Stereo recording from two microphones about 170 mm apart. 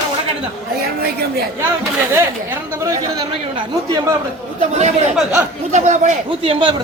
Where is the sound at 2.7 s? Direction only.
25° right (ahead or behind).